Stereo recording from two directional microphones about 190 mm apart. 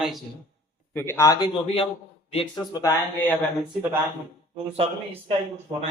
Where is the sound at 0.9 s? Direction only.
10° left (ahead or behind).